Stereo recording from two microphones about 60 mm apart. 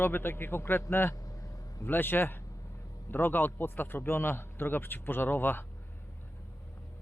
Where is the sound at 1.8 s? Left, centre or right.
Left.